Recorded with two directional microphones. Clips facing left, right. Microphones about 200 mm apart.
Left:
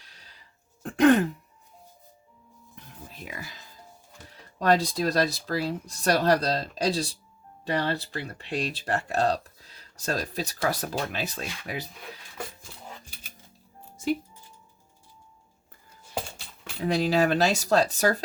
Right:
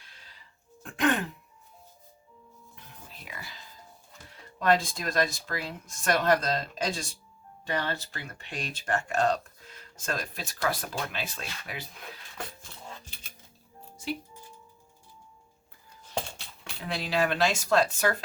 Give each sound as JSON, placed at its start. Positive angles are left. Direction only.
{"t": 0.0, "sound": "a sound", "side_deg": 40}
{"t": 0.8, "sound": "throat clearing", "side_deg": 40}
{"t": 2.7, "sound": "music", "side_deg": 45}
{"t": 4.3, "sound": "speech", "side_deg": 40}
{"t": 12.4, "sound": "dog", "side_deg": 10}
{"t": 13.9, "sound": "music", "side_deg": 50}
{"t": 16.0, "sound": "a sound", "side_deg": 5}
{"t": 16.8, "sound": "speech", "side_deg": 40}